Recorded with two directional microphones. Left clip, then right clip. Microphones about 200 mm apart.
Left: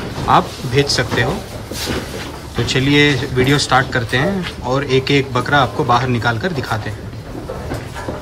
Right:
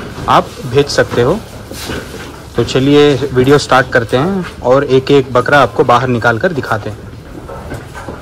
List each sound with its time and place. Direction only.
0.3 s speech: 10° left (ahead or behind)
2.5 s speech: 5° left (ahead or behind)